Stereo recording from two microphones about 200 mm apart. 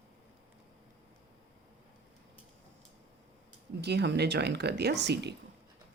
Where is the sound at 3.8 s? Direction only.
55° right (ahead or behind).